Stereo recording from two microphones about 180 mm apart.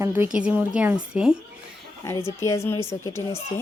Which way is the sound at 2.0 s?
15° left (ahead or behind).